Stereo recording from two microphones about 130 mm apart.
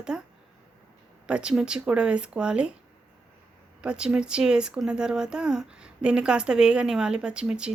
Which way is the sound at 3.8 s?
5° right (ahead or behind).